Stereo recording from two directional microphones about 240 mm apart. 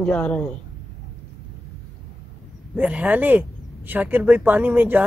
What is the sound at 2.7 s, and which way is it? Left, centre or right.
Speech, centre.